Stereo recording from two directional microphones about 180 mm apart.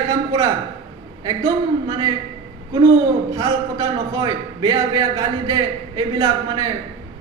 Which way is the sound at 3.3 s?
20° right (ahead or behind).